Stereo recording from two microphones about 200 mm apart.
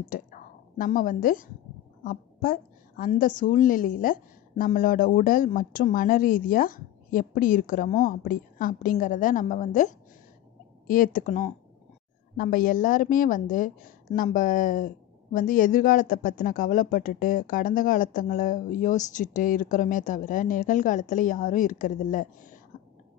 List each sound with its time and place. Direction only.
0.1 s a woman's voice: 45° left (ahead or behind)
11.1 s speech: 40° left (ahead or behind)